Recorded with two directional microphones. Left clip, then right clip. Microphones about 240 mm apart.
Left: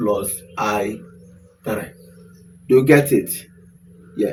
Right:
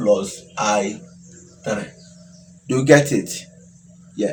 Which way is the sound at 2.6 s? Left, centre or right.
Right.